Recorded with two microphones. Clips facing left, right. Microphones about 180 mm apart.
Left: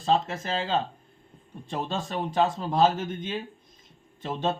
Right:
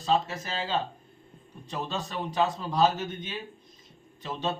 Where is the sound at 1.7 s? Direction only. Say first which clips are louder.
Left 3 dB; 50° left (ahead or behind).